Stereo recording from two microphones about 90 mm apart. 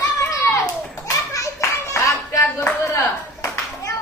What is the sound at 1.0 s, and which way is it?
Children playing, 40° left (ahead or behind).